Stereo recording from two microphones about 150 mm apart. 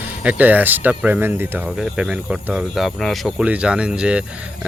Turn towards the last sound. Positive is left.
turn(degrees=-5)  # may be behind; listen again after turning